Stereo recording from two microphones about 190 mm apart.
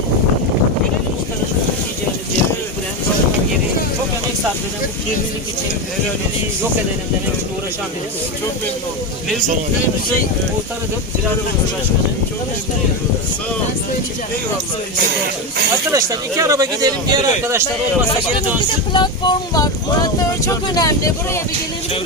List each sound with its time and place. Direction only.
15.9 s speech: 15° right (ahead or behind)
18.9 s speech: 25° left (ahead or behind)